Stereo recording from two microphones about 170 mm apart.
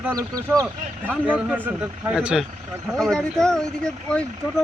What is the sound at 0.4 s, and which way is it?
Speech, 20° right (ahead or behind).